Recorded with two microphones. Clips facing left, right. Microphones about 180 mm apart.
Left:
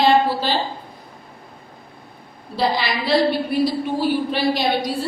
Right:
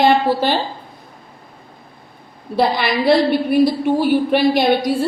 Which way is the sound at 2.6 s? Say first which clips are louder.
Right 5 dB; 55° right (ahead or behind).